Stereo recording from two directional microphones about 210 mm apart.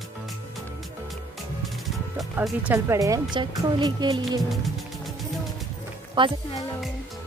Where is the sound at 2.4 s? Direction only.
15° right (ahead or behind).